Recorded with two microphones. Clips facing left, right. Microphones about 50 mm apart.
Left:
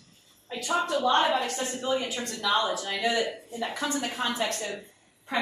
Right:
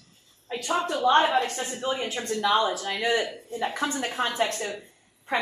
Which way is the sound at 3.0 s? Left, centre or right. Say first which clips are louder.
Right 1 dB; right.